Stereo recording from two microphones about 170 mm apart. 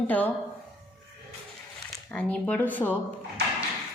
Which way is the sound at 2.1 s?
5° left (ahead or behind).